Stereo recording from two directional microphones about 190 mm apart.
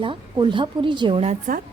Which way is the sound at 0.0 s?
25° right (ahead or behind).